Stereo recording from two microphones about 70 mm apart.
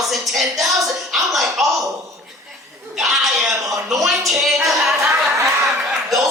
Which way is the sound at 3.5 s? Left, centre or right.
Right.